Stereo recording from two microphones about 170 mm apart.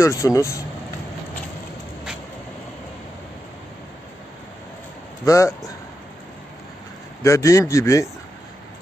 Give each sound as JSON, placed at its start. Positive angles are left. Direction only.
{"t": 0.0, "sound": "speech", "side_deg": 20}
{"t": 5.2, "sound": "speech", "side_deg": 20}
{"t": 7.2, "sound": "speech", "side_deg": 20}